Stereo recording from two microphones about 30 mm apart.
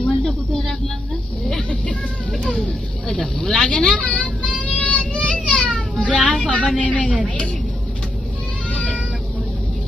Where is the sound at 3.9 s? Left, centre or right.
Left.